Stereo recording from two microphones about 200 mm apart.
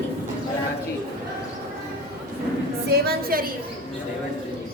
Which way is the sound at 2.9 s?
50° right (ahead or behind).